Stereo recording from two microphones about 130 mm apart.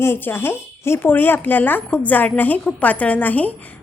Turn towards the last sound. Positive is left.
turn(degrees=10)  # may be behind; listen again after turning